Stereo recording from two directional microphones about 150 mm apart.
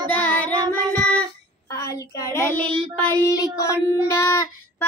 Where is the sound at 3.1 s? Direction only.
20° left (ahead or behind).